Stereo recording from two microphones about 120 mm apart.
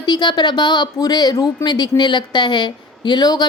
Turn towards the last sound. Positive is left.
turn(degrees=35)  # may be behind; listen again after turning